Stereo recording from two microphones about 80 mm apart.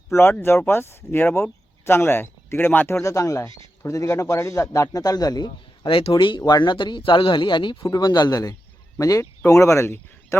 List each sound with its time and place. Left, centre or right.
0.1 s speech: left
3.1 s a man's voice: left
6.4 s speech: left